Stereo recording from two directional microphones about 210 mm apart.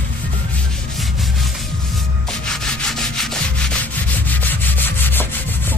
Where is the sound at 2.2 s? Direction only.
Centre (ahead or behind).